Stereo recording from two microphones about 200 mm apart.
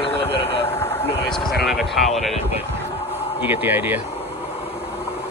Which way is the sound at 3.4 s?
10° right (ahead or behind).